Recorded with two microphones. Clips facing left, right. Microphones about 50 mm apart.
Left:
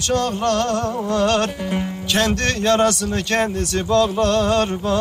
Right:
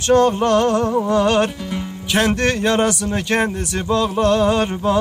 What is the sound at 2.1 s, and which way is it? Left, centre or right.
Speech, centre.